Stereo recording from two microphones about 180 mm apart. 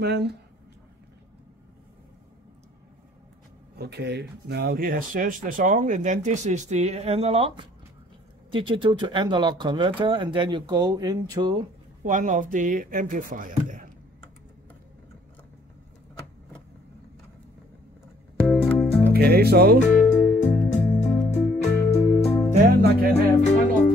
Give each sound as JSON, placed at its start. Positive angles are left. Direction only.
{"t": 0.0, "sound": "speech", "side_deg": -70}
{"t": 3.7, "sound": "speech", "side_deg": -65}
{"t": 12.0, "sound": "speech", "side_deg": -45}
{"t": 18.7, "sound": "music", "side_deg": 10}
{"t": 19.1, "sound": "speech", "side_deg": -60}
{"t": 19.9, "sound": "music", "side_deg": 45}
{"t": 22.6, "sound": "speech", "side_deg": -55}
{"t": 23.4, "sound": "music", "side_deg": 40}